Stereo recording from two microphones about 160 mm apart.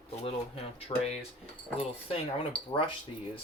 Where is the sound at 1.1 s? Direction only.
40° left (ahead or behind).